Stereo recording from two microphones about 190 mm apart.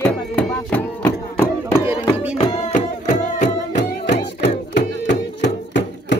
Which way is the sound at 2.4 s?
25° left (ahead or behind).